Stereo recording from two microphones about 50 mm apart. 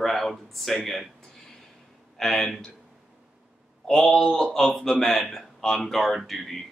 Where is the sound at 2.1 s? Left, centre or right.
Centre.